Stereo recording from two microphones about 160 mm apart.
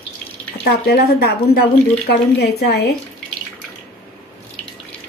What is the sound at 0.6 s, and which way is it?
Speech, 80° left.